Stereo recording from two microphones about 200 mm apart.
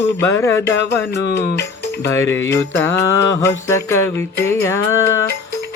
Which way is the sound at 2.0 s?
15° left (ahead or behind).